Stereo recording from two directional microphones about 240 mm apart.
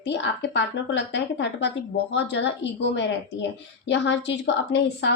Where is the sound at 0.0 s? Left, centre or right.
Left.